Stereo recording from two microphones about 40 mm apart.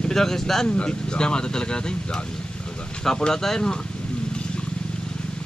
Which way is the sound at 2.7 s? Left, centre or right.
Left.